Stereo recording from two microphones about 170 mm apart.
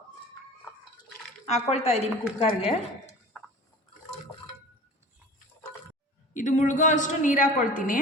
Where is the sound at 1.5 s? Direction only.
40° left (ahead or behind).